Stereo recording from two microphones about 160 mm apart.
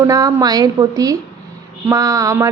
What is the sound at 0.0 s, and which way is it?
A woman's voice, 20° right (ahead or behind).